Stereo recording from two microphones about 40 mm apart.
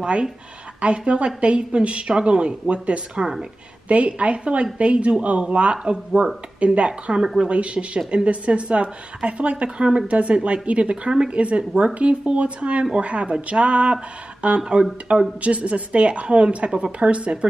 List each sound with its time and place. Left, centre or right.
0.0 s a woman's voice: right
6.9 s a woman's voice: right
14.6 s speech: centre
15.1 s speech: right